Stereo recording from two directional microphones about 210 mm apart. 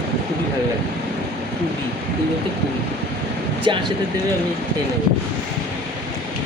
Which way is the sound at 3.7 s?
25° right (ahead or behind).